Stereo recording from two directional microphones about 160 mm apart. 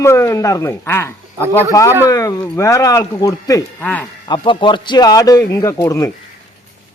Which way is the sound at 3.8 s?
10° left (ahead or behind).